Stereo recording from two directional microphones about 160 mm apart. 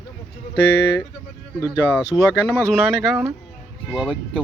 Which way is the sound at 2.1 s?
20° left (ahead or behind).